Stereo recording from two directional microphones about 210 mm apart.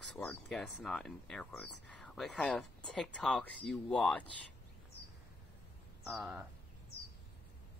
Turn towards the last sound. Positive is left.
turn(degrees=0)  # may be behind; listen again after turning